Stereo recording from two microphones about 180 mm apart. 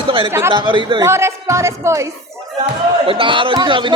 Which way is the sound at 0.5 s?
25° right (ahead or behind).